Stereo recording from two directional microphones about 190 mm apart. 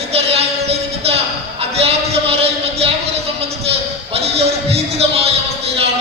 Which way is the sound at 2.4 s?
30° right (ahead or behind).